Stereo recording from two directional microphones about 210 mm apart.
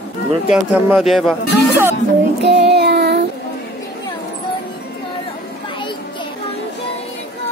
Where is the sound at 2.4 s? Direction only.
55° right (ahead or behind).